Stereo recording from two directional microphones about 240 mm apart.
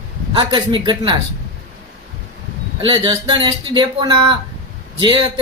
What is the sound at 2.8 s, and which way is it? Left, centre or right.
A man's voice, centre.